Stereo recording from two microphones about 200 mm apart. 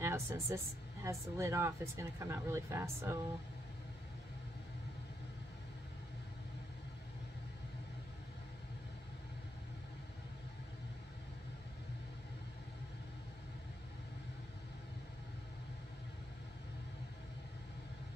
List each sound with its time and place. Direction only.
0.0 s speech: 15° right (ahead or behind)